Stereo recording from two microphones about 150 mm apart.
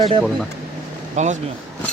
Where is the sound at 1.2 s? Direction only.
50° right (ahead or behind).